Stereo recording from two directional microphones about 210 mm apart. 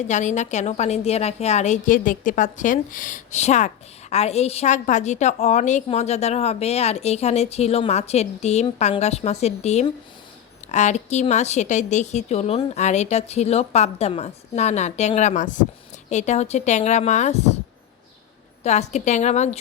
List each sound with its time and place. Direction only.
0.1 s a woman's voice: 35° left (ahead or behind)
18.6 s a woman's voice: 30° left (ahead or behind)